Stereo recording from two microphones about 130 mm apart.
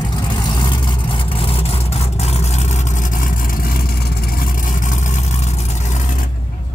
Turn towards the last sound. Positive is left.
turn(degrees=70)  # may be behind; listen again after turning